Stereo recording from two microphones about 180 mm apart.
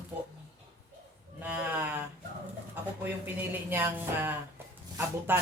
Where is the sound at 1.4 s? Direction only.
10° right (ahead or behind).